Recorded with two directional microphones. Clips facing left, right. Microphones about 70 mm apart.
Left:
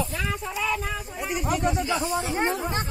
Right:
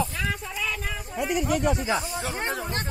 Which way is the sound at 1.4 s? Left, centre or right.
Left.